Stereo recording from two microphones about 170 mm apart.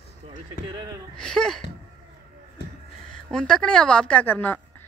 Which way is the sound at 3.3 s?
5° left (ahead or behind).